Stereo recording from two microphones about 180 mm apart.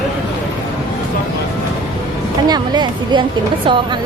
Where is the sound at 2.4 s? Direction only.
25° right (ahead or behind).